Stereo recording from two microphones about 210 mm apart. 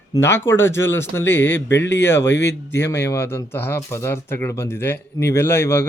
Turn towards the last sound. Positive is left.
turn(degrees=10)  # may be behind; listen again after turning